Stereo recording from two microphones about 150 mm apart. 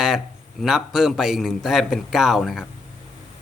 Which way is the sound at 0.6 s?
Centre (ahead or behind).